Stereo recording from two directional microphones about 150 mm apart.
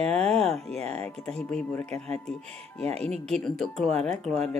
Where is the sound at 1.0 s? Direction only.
5° left (ahead or behind).